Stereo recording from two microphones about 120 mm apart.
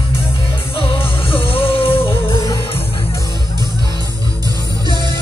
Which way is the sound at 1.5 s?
50° left (ahead or behind).